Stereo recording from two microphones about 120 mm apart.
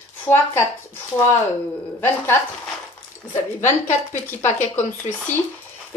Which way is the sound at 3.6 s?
90° left.